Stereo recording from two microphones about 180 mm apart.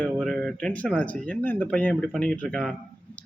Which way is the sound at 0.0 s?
5° left (ahead or behind).